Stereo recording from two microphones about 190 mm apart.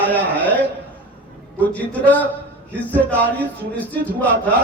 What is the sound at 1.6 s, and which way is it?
A man's voice, 10° left (ahead or behind).